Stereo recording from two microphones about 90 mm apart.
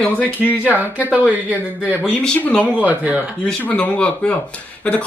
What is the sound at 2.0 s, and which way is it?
Speech, 10° left (ahead or behind).